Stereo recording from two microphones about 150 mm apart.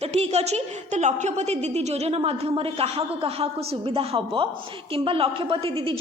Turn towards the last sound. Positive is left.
turn(degrees=-40)  # may be behind; listen again after turning